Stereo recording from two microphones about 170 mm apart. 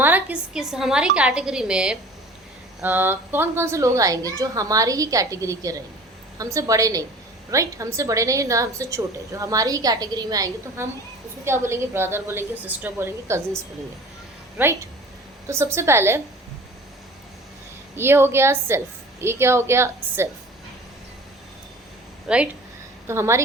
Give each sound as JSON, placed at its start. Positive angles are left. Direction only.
{"t": 0.0, "sound": "a woman's voice", "side_deg": -10}
{"t": 15.4, "sound": "a woman's voice", "side_deg": -15}
{"t": 17.9, "sound": "a woman's voice", "side_deg": -15}
{"t": 22.3, "sound": "a woman's voice", "side_deg": -5}
{"t": 23.0, "sound": "a woman's voice", "side_deg": -15}